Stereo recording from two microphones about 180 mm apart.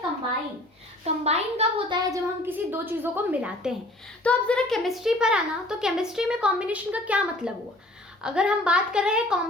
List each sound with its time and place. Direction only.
1.0 s a child's voice: 35° right (ahead or behind)
2.0 s a woman's voice: 10° right (ahead or behind)
4.2 s a woman's voice: 5° left (ahead or behind)